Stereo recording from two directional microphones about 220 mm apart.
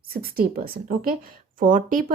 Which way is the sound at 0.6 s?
40° right (ahead or behind).